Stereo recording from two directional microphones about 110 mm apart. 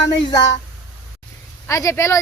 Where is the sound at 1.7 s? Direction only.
25° left (ahead or behind).